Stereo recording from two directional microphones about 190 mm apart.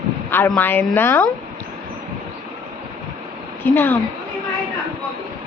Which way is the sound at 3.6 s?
10° left (ahead or behind).